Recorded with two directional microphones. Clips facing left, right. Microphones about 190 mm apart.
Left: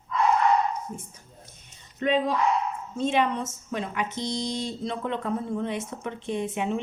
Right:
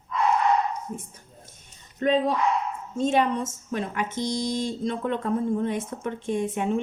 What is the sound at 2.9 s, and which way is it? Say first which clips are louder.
Speech: right 2 dB; 45° right (ahead or behind).